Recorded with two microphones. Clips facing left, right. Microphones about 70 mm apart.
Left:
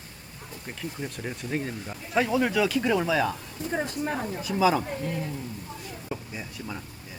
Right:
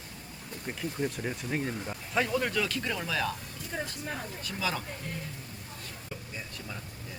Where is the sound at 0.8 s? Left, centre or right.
Centre.